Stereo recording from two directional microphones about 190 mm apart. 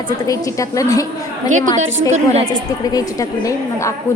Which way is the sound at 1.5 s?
40° right (ahead or behind).